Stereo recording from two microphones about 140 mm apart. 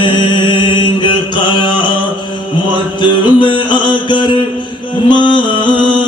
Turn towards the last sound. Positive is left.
turn(degrees=35)  # may be behind; listen again after turning